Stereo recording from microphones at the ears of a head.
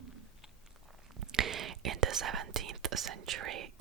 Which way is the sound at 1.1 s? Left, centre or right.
Right.